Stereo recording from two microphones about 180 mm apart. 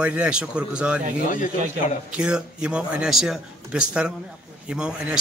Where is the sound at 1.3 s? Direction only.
45° left (ahead or behind).